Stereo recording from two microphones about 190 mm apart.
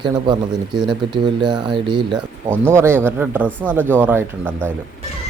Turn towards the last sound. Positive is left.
turn(degrees=-10)  # may be behind; listen again after turning